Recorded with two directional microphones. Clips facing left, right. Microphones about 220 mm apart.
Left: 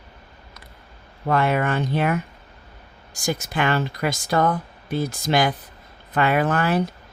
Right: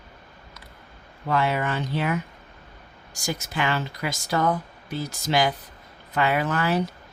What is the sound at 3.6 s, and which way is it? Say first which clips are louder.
Speech: left 4 dB; 55° left (ahead or behind).